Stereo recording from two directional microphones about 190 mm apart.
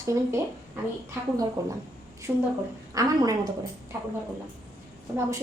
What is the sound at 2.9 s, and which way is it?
Speech, 20° right (ahead or behind).